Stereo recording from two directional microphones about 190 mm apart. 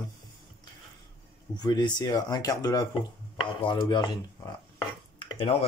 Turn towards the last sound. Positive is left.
turn(degrees=25)  # may be behind; listen again after turning